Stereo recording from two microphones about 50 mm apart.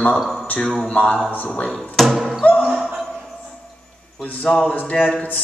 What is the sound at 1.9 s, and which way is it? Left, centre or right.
Speech, centre.